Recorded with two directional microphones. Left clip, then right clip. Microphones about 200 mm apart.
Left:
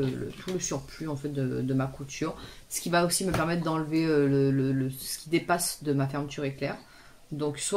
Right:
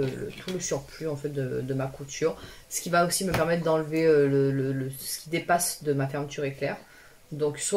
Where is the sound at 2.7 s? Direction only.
45° left (ahead or behind).